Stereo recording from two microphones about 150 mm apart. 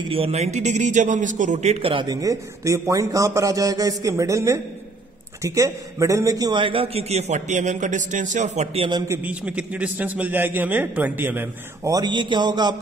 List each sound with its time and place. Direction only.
0.1 s a man's voice: 40° right (ahead or behind)
2.2 s a man's voice: 20° right (ahead or behind); by 8.8 s 50° right (ahead or behind)
9.0 s a man's voice: 15° right (ahead or behind)
11.9 s a man's voice: 30° right (ahead or behind)